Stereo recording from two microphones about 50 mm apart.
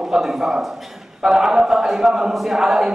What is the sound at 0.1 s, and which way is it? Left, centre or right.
A man's voice, centre.